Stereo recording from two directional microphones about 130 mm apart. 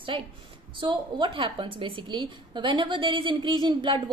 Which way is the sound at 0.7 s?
40° right (ahead or behind).